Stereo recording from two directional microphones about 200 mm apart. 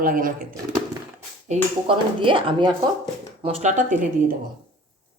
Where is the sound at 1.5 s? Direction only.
25° right (ahead or behind).